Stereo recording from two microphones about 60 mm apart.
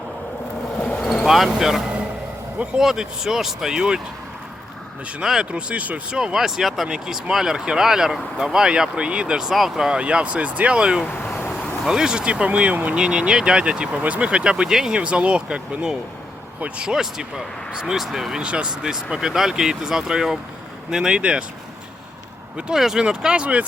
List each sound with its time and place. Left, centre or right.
0.9 s vehicle: left
1.5 s speech: centre
5.2 s speech: centre
6.1 s speech: centre; by 13.0 s right
13.0 s speech: centre
22.7 s speech: centre